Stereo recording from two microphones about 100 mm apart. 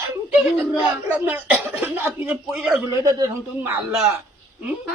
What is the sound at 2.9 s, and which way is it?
Speech, 35° right (ahead or behind).